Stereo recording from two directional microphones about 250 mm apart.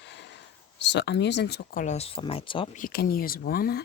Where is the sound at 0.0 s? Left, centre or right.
Left.